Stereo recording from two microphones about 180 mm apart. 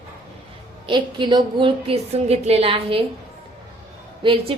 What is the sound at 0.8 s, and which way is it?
A woman's voice, 25° right (ahead or behind).